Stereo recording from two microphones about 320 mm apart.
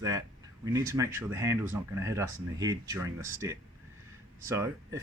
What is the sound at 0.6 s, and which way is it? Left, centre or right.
Speech, centre.